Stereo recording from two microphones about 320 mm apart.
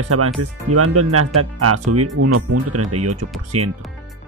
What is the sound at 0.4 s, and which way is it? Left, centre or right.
Speech, right.